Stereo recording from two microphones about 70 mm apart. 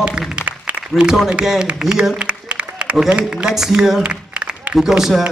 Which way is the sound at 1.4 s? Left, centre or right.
Centre.